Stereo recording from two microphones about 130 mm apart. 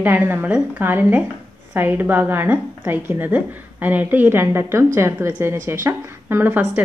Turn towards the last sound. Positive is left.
turn(degrees=-15)  # may be behind; listen again after turning